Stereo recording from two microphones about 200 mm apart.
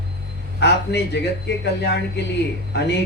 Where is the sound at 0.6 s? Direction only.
60° left (ahead or behind).